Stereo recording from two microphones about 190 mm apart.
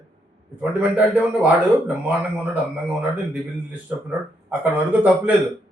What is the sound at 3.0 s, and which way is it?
A man's voice, 5° right (ahead or behind).